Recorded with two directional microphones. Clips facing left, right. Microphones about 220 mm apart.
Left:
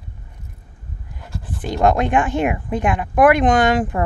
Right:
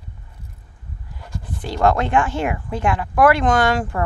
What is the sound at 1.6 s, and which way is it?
Speech, 20° left (ahead or behind).